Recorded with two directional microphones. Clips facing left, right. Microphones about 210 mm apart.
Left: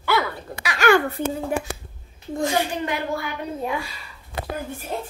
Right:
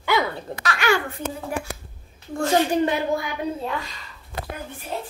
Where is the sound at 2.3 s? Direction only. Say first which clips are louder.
Right 2 dB; 15° left (ahead or behind).